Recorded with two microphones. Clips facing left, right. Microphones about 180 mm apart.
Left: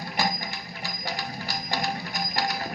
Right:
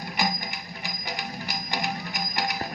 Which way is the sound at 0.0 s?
20° right (ahead or behind).